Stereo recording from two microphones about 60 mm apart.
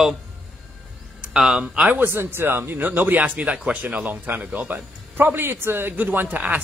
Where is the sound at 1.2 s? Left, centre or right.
Centre.